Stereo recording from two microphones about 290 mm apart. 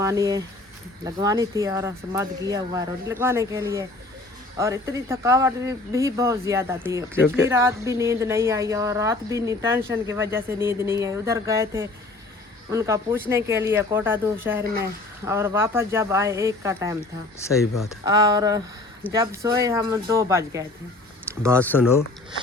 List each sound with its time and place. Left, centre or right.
0.0 s a woman's voice: centre
14.6 s speech: right
15.2 s a woman's voice: centre
18.0 s a woman's voice: centre